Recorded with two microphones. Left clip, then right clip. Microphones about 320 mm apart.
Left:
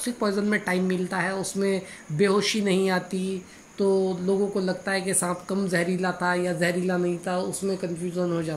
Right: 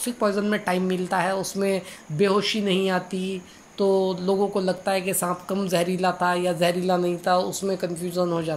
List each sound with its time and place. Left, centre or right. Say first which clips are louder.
0.0 s a woman's voice: right 3 dB; centre